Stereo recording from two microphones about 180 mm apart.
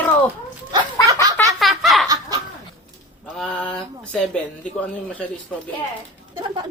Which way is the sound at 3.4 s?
5° left (ahead or behind).